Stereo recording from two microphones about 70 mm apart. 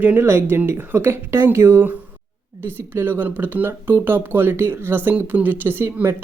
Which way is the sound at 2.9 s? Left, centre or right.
Right.